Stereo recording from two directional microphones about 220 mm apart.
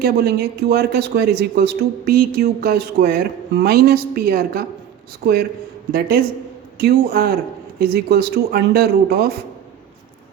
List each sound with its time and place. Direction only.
0.0 s speech: 45° right (ahead or behind)